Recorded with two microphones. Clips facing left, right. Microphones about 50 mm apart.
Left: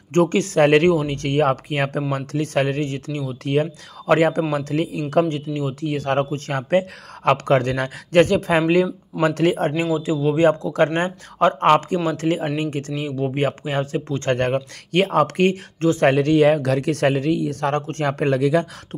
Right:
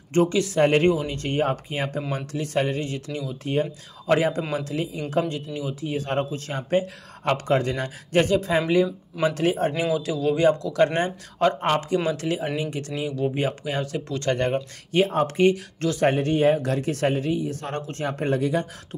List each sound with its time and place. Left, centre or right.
0.1 s speech: left
0.6 s speech: left
2.1 s speech: left
9.9 s speech: left
11.6 s speech: left
12.1 s speech: left
14.3 s speech: left
16.1 s speech: left